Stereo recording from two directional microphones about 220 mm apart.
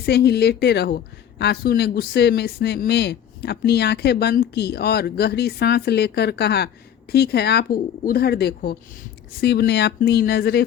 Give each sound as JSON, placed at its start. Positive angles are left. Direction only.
{"t": 0.0, "sound": "a woman's voice", "side_deg": 45}